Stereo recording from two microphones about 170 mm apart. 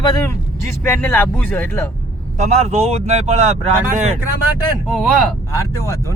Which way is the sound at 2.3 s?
40° right (ahead or behind).